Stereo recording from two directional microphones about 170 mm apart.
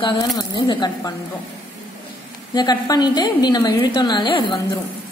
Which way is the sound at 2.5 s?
25° left (ahead or behind).